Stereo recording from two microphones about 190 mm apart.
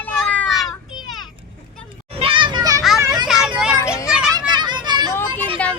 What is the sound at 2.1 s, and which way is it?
Children playing, 25° right (ahead or behind).